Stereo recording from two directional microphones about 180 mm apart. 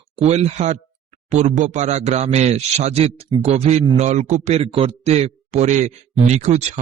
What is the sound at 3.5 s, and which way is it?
A man's voice, 40° right (ahead or behind).